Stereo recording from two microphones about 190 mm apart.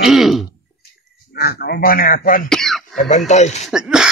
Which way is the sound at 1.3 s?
55° left (ahead or behind).